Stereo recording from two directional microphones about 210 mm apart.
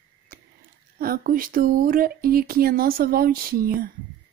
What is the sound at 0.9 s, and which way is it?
Speech, 45° right (ahead or behind).